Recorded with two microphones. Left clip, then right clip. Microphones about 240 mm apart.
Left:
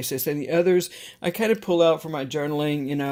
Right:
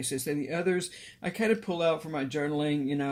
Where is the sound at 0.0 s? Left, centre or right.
Left.